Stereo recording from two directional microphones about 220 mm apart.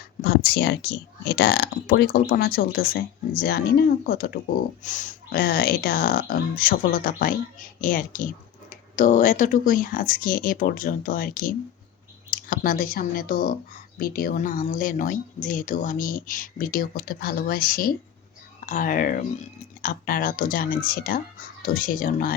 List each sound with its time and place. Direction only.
0.2 s speech: 45° left (ahead or behind)